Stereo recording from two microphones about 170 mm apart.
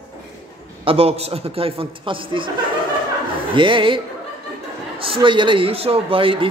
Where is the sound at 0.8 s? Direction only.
35° right (ahead or behind).